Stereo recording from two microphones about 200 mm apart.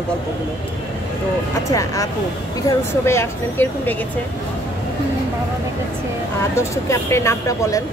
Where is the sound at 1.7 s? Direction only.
15° left (ahead or behind).